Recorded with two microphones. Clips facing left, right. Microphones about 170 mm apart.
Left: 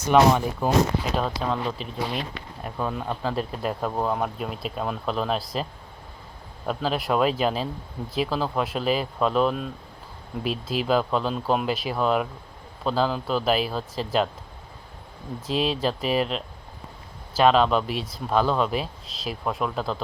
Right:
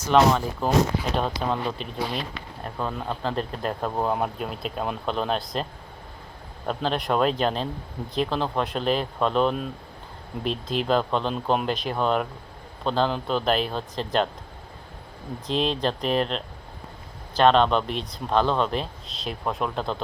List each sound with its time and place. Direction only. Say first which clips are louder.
0.1 s speech: left 1 dB; 10° left (ahead or behind)
1.4 s speech: even; centre (ahead or behind)
6.7 s speech: even; 5° left (ahead or behind)
15.4 s speech: even; 5° left (ahead or behind)